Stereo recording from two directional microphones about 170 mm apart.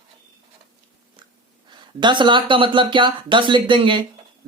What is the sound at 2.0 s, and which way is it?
Speech, 25° right (ahead or behind).